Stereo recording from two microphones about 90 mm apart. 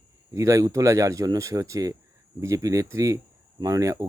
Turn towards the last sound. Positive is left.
turn(degrees=-40)  # may be behind; listen again after turning